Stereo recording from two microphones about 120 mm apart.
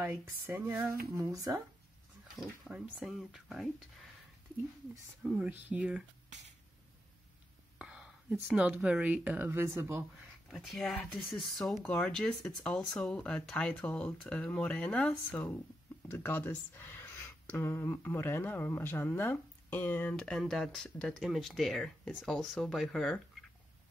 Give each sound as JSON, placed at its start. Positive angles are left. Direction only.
{"t": 0.1, "sound": "speech", "side_deg": -20}
{"t": 2.7, "sound": "speech", "side_deg": -10}
{"t": 3.0, "sound": "speech", "side_deg": 0}
{"t": 5.2, "sound": "speech", "side_deg": -10}
{"t": 7.8, "sound": "speech", "side_deg": -5}
{"t": 10.5, "sound": "speech", "side_deg": 0}